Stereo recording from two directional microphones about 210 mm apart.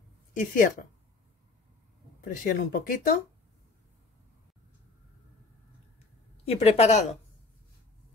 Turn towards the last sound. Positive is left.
turn(degrees=30)  # may be behind; listen again after turning